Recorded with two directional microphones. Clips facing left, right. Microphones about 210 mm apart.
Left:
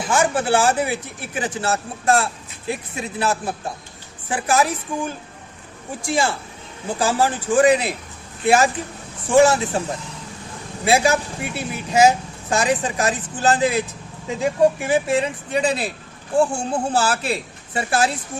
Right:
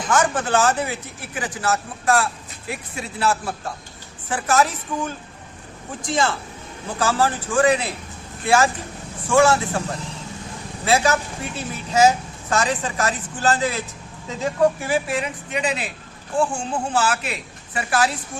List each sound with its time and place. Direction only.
0.1 s a woman's voice: 10° left (ahead or behind)
1.4 s a woman's voice: 25° left (ahead or behind)
10.8 s a woman's voice: 15° left (ahead or behind)